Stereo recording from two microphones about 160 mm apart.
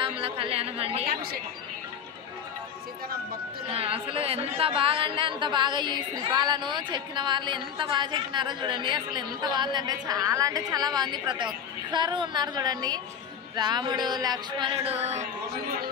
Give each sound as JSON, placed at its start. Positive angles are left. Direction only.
{"t": 0.0, "sound": "a woman's voice", "side_deg": -35}
{"t": 1.0, "sound": "speech", "side_deg": -70}
{"t": 3.6, "sound": "speech", "side_deg": -35}